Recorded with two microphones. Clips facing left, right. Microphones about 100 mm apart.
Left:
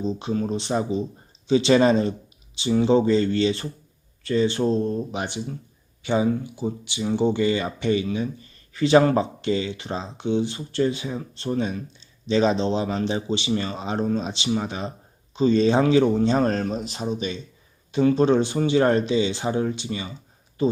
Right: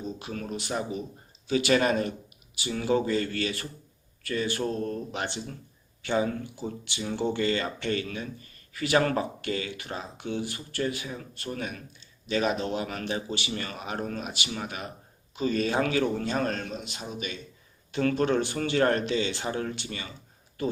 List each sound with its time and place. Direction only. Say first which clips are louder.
0.0 s speech: left 10 dB; 25° left (ahead or behind)